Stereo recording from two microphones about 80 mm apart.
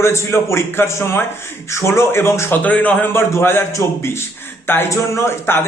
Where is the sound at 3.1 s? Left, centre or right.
Left.